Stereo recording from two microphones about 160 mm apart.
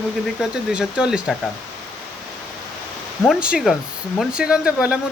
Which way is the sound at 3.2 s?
5° right (ahead or behind).